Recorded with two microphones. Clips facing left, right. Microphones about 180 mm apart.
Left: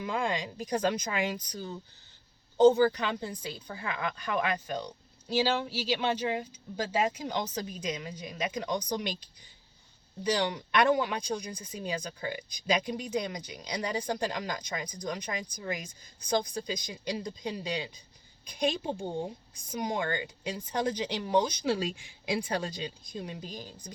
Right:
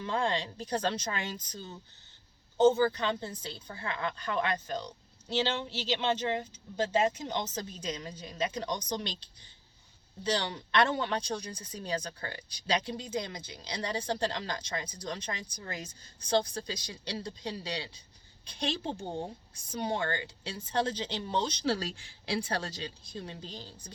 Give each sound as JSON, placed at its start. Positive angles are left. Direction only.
{"t": 0.0, "sound": "speech", "side_deg": 15}
{"t": 2.6, "sound": "speech", "side_deg": 15}